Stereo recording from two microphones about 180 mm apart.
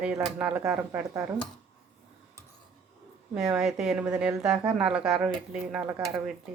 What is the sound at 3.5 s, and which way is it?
A woman's voice, 5° right (ahead or behind).